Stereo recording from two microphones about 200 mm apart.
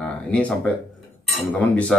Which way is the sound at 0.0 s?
5° left (ahead or behind).